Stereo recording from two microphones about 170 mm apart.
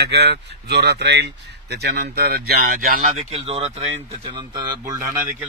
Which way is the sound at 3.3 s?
35° right (ahead or behind).